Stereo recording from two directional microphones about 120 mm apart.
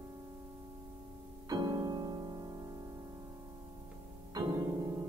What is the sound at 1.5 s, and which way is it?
Music, 35° right (ahead or behind).